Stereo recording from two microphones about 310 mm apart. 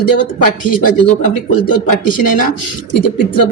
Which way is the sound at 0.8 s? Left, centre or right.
Left.